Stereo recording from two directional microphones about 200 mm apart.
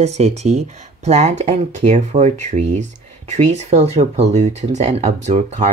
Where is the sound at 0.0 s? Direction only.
35° right (ahead or behind).